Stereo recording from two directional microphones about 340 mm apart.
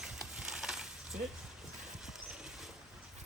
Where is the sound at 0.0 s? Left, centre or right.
Centre.